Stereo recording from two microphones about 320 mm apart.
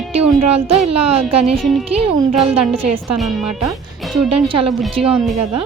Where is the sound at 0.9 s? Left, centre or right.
Centre.